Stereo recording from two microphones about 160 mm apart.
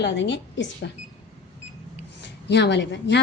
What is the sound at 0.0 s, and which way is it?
Speech, 90° left.